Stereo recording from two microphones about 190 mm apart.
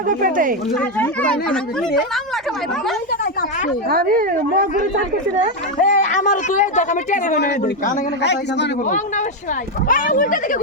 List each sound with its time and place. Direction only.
0.1 s speech: 45° right (ahead or behind)
0.8 s speech: 10° left (ahead or behind)
3.8 s speech: 50° right (ahead or behind)
5.8 s speech: 40° left (ahead or behind)
8.2 s a man's voice: 65° left (ahead or behind)
9.9 s speech: 45° left (ahead or behind)